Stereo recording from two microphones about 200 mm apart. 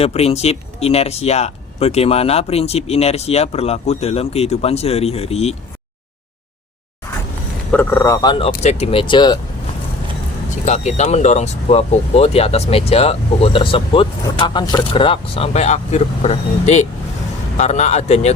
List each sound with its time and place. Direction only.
0.0 s speech: 30° left (ahead or behind)
7.7 s speech: 10° left (ahead or behind)
10.5 s speech: 35° left (ahead or behind)